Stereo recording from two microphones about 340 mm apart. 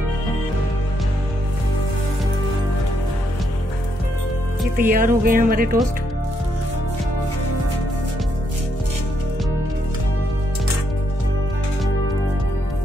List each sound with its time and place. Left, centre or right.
4.7 s speech: right